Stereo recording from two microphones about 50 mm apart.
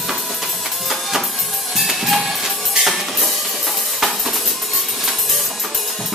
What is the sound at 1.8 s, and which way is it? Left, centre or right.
Music, centre.